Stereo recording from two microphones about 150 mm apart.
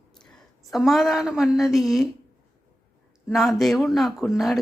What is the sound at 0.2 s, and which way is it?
A woman's voice, 5° left (ahead or behind).